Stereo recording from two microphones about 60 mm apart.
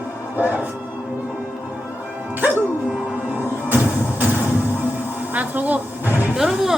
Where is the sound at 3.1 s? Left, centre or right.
Right.